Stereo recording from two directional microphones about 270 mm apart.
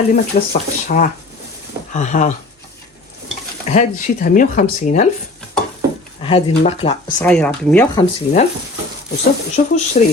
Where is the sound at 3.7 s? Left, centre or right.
Left.